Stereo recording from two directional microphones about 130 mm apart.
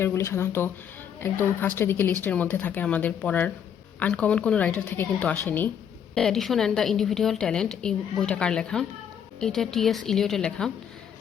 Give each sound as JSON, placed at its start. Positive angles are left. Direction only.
{"t": 0.0, "sound": "speech", "side_deg": 20}
{"t": 6.1, "sound": "a woman's voice", "side_deg": 5}